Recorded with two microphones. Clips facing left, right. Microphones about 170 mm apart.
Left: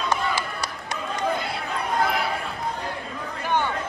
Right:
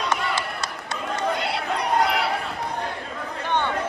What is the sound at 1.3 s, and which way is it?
Chatter, 75° right (ahead or behind).